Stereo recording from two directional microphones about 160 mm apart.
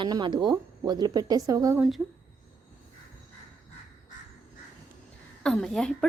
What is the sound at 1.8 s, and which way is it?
Speech, centre (ahead or behind).